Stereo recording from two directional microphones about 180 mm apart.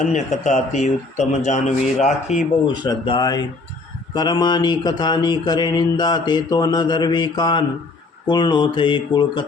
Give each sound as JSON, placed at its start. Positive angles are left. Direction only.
{"t": 0.1, "sound": "speech", "side_deg": 40}
{"t": 2.8, "sound": "mantra", "side_deg": 20}